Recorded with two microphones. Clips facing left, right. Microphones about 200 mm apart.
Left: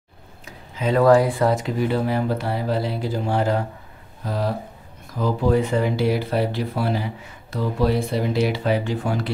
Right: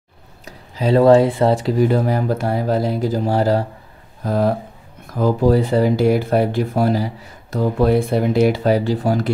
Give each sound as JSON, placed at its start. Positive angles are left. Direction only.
{"t": 0.5, "sound": "speech", "side_deg": -35}
{"t": 4.2, "sound": "speech", "side_deg": -50}